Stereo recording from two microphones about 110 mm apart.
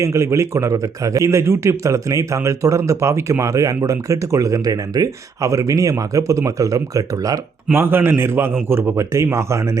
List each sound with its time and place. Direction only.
0.0 s a man's voice: 25° right (ahead or behind)
7.7 s a man's voice: 20° right (ahead or behind)